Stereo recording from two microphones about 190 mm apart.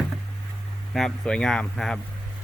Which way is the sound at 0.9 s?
5° left (ahead or behind).